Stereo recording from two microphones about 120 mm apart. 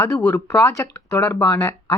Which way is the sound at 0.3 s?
25° left (ahead or behind).